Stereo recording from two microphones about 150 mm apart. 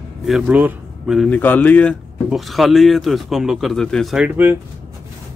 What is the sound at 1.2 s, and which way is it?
Speech, 10° left (ahead or behind).